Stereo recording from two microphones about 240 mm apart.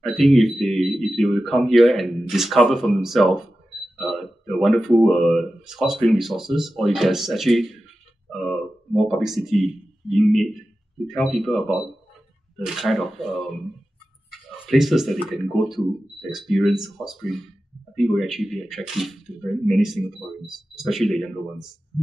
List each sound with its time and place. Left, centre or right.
0.0 s a man's voice: centre
14.7 s speech: centre